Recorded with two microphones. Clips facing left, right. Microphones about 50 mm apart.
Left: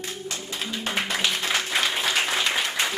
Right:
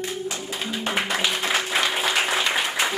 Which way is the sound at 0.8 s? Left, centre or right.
Centre.